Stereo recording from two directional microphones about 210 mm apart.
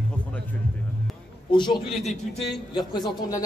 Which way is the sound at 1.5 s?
20° left (ahead or behind).